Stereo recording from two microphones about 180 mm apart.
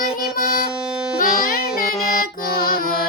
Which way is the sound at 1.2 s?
50° left (ahead or behind).